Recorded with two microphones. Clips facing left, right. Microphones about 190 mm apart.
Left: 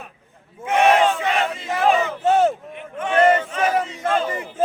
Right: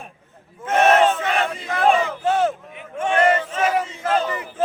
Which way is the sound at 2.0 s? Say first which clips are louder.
Left 3 dB; 25° left (ahead or behind).